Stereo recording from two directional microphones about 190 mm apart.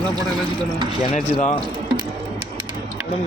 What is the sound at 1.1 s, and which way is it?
Speech, 40° left (ahead or behind).